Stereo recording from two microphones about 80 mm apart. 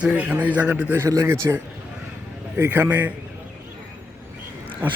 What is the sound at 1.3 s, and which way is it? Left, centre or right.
A man's voice, right.